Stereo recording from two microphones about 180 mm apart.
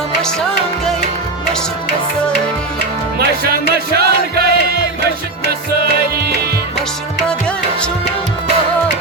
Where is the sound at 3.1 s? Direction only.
60° right (ahead or behind).